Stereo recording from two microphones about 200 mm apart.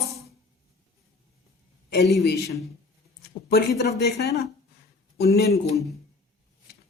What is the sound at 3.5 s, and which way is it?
Speech, 55° left (ahead or behind).